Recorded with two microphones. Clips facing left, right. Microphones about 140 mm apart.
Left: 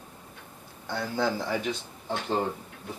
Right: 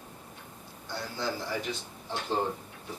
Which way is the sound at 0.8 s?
55° left (ahead or behind).